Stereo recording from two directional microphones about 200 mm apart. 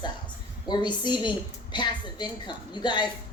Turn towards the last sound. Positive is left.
turn(degrees=20)  # may be behind; listen again after turning